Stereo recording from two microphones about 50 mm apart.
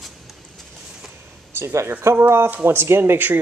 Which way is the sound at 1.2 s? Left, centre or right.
Right.